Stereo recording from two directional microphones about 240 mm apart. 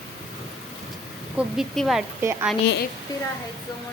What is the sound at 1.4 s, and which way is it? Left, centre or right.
Speech, centre.